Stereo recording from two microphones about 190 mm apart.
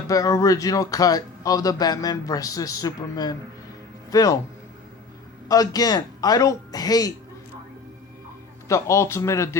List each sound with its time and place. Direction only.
0.1 s a man's voice: 15° left (ahead or behind)
5.5 s a man's voice: 20° left (ahead or behind)
8.6 s a man's voice: 15° left (ahead or behind)